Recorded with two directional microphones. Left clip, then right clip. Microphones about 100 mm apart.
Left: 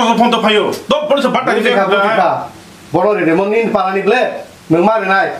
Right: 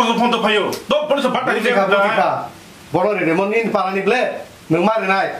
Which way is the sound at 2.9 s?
15° right (ahead or behind).